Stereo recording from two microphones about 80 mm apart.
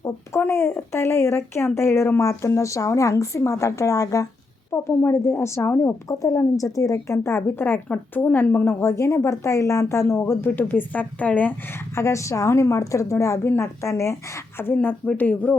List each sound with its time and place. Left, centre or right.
0.0 s a woman's voice: left
4.7 s a woman's voice: left
11.9 s a woman's voice: left; by 15.5 s centre